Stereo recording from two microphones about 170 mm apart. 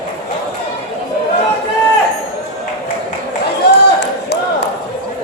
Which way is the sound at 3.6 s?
75° left (ahead or behind).